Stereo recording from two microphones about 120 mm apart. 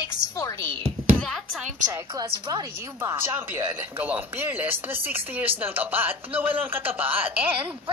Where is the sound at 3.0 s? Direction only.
20° right (ahead or behind).